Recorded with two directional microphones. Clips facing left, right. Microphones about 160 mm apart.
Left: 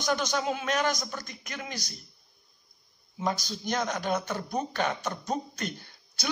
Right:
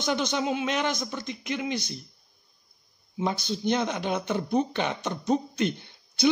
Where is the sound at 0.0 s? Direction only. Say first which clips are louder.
Right 2 dB; 20° right (ahead or behind).